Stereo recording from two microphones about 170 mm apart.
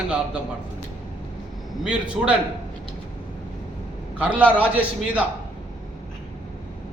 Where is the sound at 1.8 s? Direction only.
5° right (ahead or behind).